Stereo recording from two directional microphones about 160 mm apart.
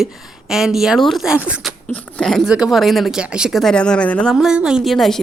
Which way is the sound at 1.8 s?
5° left (ahead or behind).